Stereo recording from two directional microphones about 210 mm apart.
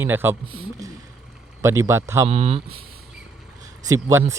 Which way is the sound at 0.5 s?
25° right (ahead or behind).